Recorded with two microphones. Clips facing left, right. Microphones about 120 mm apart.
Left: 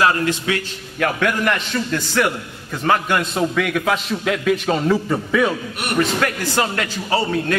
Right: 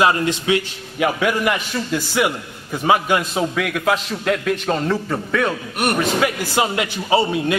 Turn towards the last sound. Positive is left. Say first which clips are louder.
# right 2 dB
turn(degrees=-15)  # may be behind; listen again after turning